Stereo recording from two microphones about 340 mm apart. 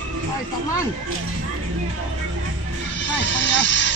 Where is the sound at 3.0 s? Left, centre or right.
Left.